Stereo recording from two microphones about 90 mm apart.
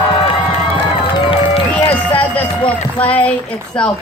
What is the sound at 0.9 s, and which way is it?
Run, 80° left.